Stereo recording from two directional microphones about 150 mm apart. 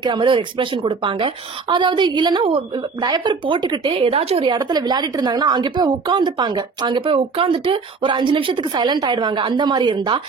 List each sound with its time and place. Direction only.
0.0 s a woman's voice: 30° right (ahead or behind)
3.9 s a woman's voice: 40° right (ahead or behind)